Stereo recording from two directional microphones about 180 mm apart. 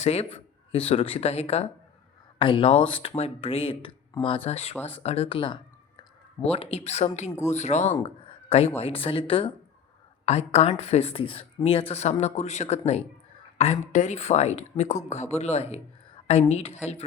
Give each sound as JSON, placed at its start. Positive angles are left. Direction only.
{"t": 0.0, "sound": "speech", "side_deg": 35}
{"t": 7.3, "sound": "speech", "side_deg": 15}
{"t": 7.5, "sound": "speech", "side_deg": 40}
{"t": 8.0, "sound": "a sound", "side_deg": 30}
{"t": 8.8, "sound": "speech", "side_deg": 30}